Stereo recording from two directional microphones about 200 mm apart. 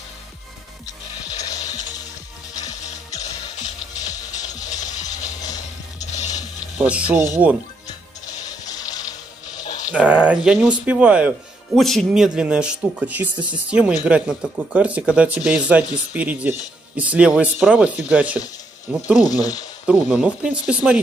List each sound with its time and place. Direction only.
1.4 s ratchet: 15° left (ahead or behind)
2.6 s music: 35° left (ahead or behind)
4.0 s music: 20° left (ahead or behind)
4.9 s ratchet: 20° left (ahead or behind)
5.9 s music: 35° left (ahead or behind)
6.8 s speech: 5° right (ahead or behind)
8.3 s music: 20° left (ahead or behind)
9.8 s speech: 5° right (ahead or behind)
19.1 s speech: 20° left (ahead or behind)
19.9 s speech: 5° right (ahead or behind)